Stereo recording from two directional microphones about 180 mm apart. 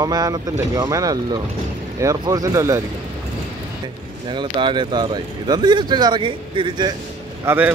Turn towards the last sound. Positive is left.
turn(degrees=-10)  # may be behind; listen again after turning